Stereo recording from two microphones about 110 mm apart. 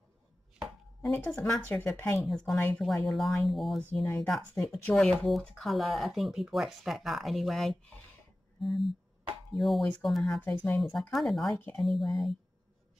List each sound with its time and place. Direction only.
0.6 s chopping: 5° left (ahead or behind)
1.7 s speech: 20° left (ahead or behind)
2.1 s speech: centre (ahead or behind)
4.2 s speech: 15° left (ahead or behind)
10.4 s speech: 15° left (ahead or behind)
10.8 s speech: centre (ahead or behind)